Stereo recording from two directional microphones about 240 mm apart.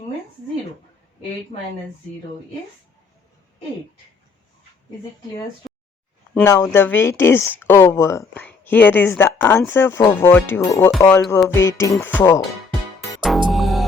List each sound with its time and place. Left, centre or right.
1.5 s speech: left
6.3 s speech: centre
13.5 s music: centre